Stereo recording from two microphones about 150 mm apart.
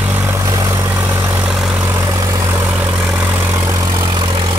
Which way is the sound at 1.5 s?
5° right (ahead or behind).